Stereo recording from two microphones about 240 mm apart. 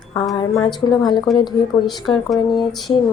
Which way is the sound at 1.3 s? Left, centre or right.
Centre.